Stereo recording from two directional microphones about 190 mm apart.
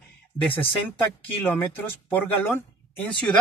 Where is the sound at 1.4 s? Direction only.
10° left (ahead or behind).